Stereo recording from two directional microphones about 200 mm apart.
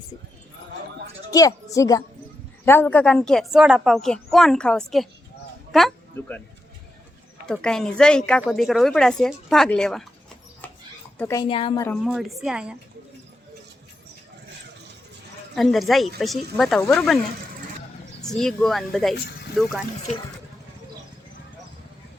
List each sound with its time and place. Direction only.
1.3 s speech: 15° left (ahead or behind)
6.1 s speech: 10° left (ahead or behind)
7.4 s speech: 5° left (ahead or behind)
11.2 s speech: 15° left (ahead or behind)
11.4 s speech: 25° left (ahead or behind)
12.0 s speech: centre (ahead or behind)
15.5 s speech: centre (ahead or behind)
18.2 s speech: centre (ahead or behind)